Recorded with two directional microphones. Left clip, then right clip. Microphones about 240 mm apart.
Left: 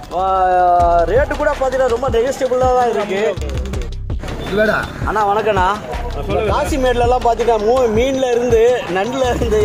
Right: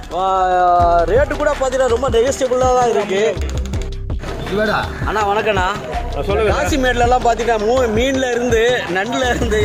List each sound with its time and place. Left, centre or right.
0.2 s speech: centre
4.5 s speech: centre
5.0 s speech: centre